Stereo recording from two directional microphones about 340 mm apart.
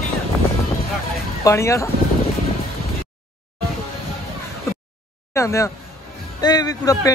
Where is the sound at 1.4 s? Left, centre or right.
Centre.